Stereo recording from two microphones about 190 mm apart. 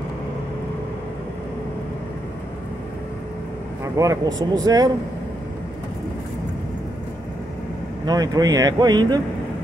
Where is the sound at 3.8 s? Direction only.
15° right (ahead or behind).